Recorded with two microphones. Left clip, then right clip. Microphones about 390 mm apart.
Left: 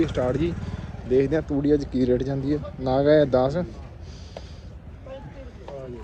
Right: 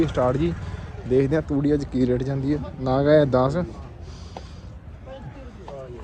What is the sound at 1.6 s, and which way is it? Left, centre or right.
Speech, centre.